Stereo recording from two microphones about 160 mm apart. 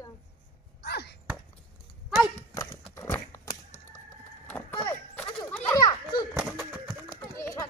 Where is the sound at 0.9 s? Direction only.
90° left.